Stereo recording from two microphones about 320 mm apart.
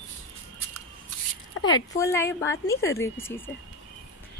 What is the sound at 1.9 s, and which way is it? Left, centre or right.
Speech, centre.